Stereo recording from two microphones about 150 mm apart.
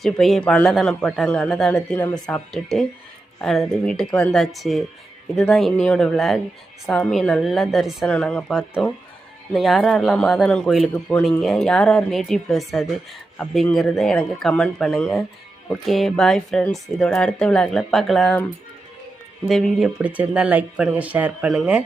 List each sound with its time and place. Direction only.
0.0 s a man's voice: centre (ahead or behind)
19.5 s speech: centre (ahead or behind)